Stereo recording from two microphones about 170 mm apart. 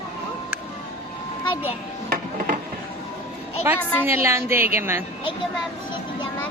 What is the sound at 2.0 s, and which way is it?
Music, 60° right (ahead or behind).